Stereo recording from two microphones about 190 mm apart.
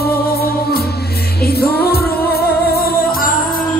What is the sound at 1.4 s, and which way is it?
Music, 55° left (ahead or behind).